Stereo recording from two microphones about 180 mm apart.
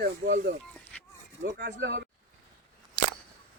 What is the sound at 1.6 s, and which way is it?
Speech, 70° right (ahead or behind).